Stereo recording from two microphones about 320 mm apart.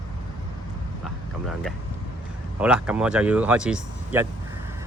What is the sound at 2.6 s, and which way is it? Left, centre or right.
Speech, centre.